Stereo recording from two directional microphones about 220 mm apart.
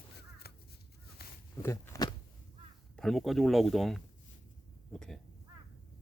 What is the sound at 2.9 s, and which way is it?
A man's voice, centre (ahead or behind).